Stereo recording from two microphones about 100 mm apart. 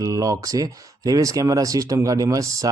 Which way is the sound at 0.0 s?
35° right (ahead or behind).